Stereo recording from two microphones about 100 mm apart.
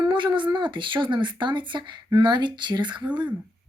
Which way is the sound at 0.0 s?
55° right (ahead or behind).